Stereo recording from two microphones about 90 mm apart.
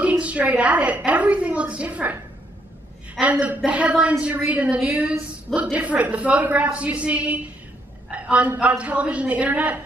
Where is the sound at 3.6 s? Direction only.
10° right (ahead or behind).